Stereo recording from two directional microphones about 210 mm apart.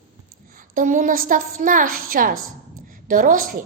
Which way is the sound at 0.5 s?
40° right (ahead or behind).